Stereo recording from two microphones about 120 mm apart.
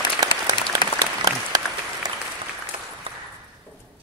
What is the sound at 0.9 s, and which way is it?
Applause, 30° right (ahead or behind).